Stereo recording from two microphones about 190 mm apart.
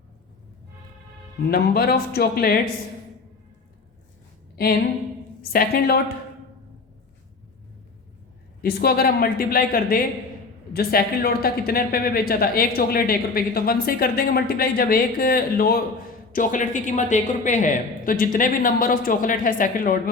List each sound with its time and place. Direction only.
1.5 s speech: 55° left (ahead or behind)
5.4 s speech: 50° left (ahead or behind)
8.6 s speech: 55° left (ahead or behind)